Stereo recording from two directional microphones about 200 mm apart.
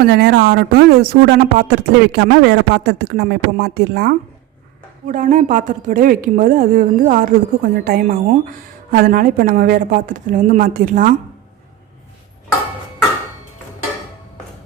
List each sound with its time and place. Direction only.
0.0 s speech: 55° right (ahead or behind)
5.0 s a woman's voice: 40° right (ahead or behind)